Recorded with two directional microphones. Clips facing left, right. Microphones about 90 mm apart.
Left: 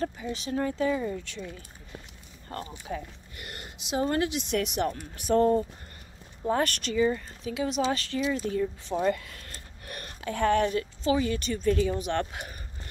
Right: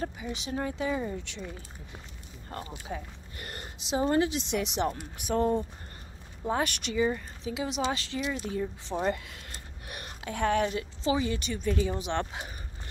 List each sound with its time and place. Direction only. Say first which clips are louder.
0.0 s speech: left 3 dB; 15° right (ahead or behind)
2.9 s speech: left 3 dB; 10° right (ahead or behind)
3.3 s speech: right 1 dB; 35° right (ahead or behind); by 11.9 s 10° right (ahead or behind)
11.9 s speech: left 2 dB; 25° right (ahead or behind)